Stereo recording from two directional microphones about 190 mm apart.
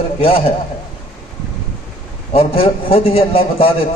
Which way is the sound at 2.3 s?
30° left (ahead or behind).